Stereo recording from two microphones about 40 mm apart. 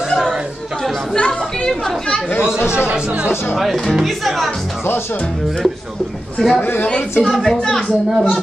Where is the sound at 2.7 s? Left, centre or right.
Right.